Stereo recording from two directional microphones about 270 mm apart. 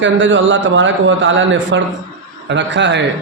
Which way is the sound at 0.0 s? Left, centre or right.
Right.